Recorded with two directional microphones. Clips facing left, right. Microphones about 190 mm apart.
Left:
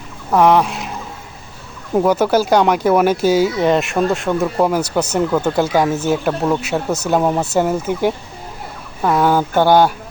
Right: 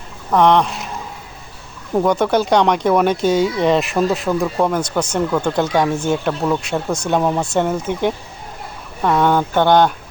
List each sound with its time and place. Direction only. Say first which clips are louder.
0.3 s speech: left 1 dB; 5° left (ahead or behind)
2.0 s speech: left 1 dB; 5° left (ahead or behind)